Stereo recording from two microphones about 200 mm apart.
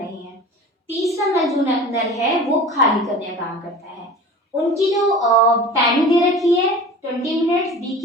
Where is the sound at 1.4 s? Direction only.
Centre (ahead or behind).